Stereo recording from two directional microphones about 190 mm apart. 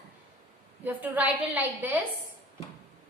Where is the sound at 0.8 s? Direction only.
10° right (ahead or behind).